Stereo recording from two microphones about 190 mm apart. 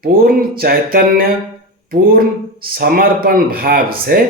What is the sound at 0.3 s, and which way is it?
Speech, 50° right (ahead or behind).